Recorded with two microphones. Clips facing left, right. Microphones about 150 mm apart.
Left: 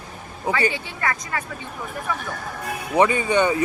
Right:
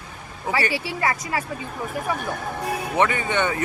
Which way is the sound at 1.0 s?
25° right (ahead or behind).